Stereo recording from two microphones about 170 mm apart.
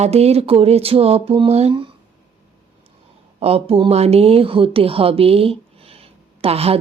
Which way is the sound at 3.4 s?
35° right (ahead or behind).